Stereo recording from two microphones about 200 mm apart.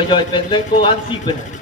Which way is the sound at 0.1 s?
25° left (ahead or behind).